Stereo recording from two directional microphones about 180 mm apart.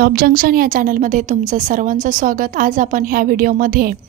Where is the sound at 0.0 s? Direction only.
55° right (ahead or behind).